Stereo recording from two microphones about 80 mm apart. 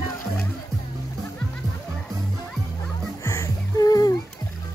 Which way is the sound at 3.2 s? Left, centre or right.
Left.